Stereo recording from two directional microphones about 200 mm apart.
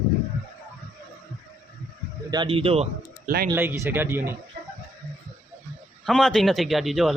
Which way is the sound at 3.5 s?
15° right (ahead or behind).